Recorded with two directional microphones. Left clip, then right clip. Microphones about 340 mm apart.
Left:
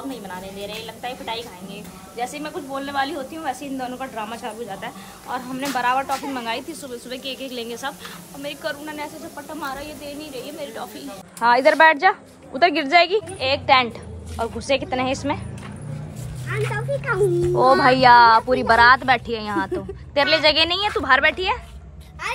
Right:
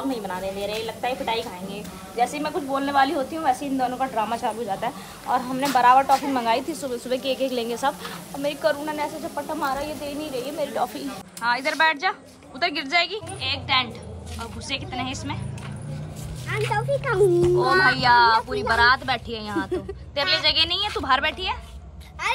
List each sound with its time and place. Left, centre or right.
0.1 s a woman's voice: centre
16.4 s music: centre
16.7 s speech: right
17.6 s a woman's voice: centre